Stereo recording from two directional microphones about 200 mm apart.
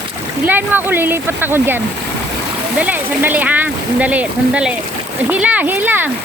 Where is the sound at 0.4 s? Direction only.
10° right (ahead or behind).